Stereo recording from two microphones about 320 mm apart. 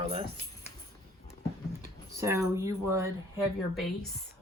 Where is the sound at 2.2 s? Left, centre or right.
Centre.